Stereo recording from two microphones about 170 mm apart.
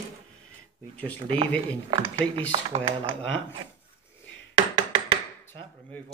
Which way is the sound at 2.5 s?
35° right (ahead or behind).